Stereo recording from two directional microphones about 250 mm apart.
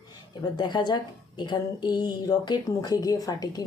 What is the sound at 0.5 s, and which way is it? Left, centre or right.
A woman's voice, centre.